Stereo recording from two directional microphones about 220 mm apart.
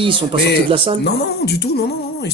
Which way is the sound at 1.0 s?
50° left (ahead or behind).